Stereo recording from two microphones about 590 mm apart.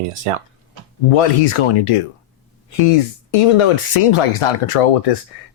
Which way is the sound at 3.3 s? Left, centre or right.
Left.